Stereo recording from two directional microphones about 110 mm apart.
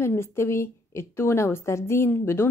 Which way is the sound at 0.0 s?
25° left (ahead or behind).